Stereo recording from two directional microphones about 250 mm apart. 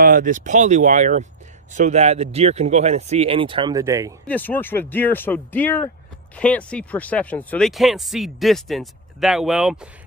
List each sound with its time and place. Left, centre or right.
0.0 s speech: right; by 4.1 s centre
4.3 s speech: centre